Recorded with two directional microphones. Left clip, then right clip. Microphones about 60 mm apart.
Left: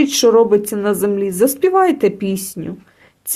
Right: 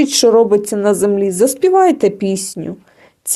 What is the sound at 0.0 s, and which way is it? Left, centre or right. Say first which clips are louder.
A woman's voice: right 1 dB; centre.